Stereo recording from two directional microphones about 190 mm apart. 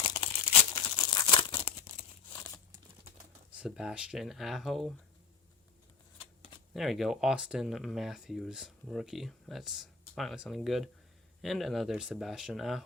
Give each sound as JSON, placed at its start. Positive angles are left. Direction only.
{"t": 0.0, "sound": "crumpling", "side_deg": 25}
{"t": 3.5, "sound": "speech", "side_deg": -5}
{"t": 6.7, "sound": "speech", "side_deg": 0}